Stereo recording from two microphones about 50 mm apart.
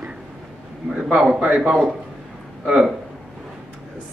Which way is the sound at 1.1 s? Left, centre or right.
Centre.